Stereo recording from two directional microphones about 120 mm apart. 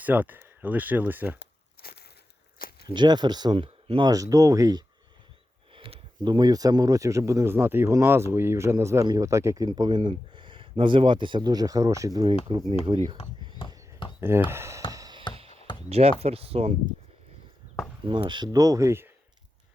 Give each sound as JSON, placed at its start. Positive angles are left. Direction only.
{"t": 0.0, "sound": "speech", "side_deg": -15}
{"t": 2.8, "sound": "speech", "side_deg": -40}
{"t": 4.1, "sound": "speech", "side_deg": -30}
{"t": 5.7, "sound": "speech", "side_deg": -45}
{"t": 9.6, "sound": "speech", "side_deg": -35}
{"t": 12.5, "sound": "speech", "side_deg": -50}
{"t": 12.9, "sound": "speech", "side_deg": -30}
{"t": 13.6, "sound": "a sound", "side_deg": 45}
{"t": 14.2, "sound": "speech", "side_deg": -20}
{"t": 14.9, "sound": "a sound", "side_deg": -30}
{"t": 15.4, "sound": "chop", "side_deg": -55}
{"t": 15.9, "sound": "speech", "side_deg": -60}
{"t": 18.1, "sound": "speech", "side_deg": -40}